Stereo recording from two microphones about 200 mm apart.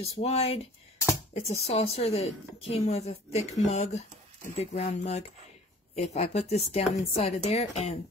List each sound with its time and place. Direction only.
0.2 s a woman's voice: 30° left (ahead or behind)